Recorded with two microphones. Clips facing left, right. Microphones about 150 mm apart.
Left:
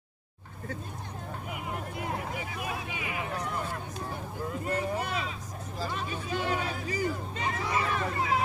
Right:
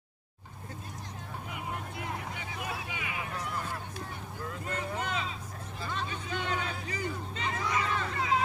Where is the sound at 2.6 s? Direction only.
25° left (ahead or behind).